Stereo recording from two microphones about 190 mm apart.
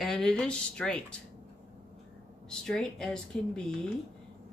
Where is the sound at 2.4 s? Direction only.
5° left (ahead or behind).